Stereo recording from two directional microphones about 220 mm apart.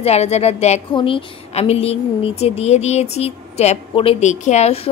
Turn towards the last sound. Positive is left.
turn(degrees=30)  # may be behind; listen again after turning